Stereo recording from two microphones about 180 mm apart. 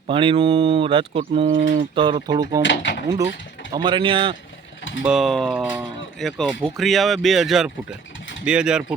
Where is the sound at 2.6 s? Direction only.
75° left (ahead or behind).